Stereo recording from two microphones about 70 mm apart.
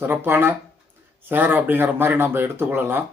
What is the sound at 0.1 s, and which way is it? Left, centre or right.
Speech, right.